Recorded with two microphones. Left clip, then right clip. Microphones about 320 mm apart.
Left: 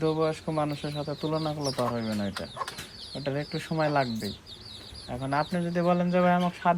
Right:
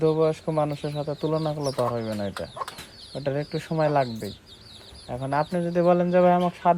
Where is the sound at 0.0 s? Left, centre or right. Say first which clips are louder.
Right 5 dB; right.